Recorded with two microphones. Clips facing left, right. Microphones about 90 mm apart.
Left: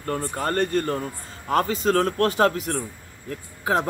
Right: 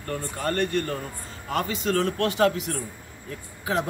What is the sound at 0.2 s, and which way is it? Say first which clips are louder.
A man's voice: left 1 dB; 35° left (ahead or behind).